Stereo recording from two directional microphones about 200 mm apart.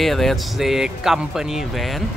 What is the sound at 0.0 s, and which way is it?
Speech, centre (ahead or behind).